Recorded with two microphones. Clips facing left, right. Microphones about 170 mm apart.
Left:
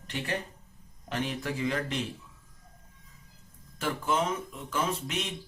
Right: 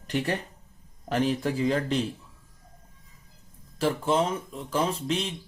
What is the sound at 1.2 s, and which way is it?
Speech, 35° right (ahead or behind).